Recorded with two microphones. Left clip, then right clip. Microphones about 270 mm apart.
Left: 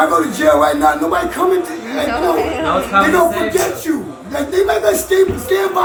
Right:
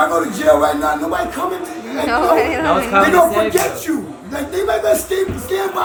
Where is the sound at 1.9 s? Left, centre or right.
Centre.